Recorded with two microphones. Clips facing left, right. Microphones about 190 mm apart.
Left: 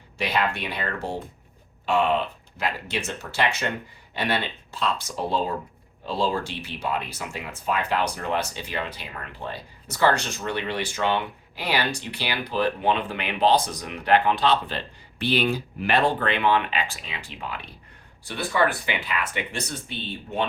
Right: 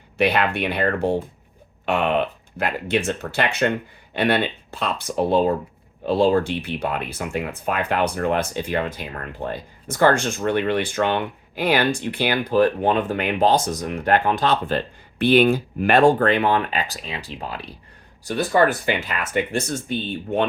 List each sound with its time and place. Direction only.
0.2 s speech: 60° right (ahead or behind)